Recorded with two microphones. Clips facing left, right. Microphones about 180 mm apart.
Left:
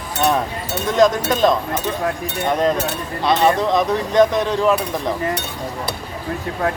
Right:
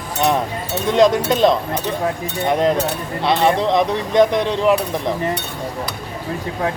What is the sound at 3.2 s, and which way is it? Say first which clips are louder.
Speech: even; 25° right (ahead or behind).